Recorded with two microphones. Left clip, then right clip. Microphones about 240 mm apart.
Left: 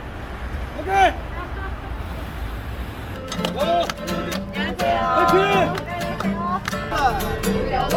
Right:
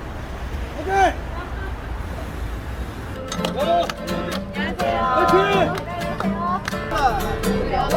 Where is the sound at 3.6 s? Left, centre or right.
Centre.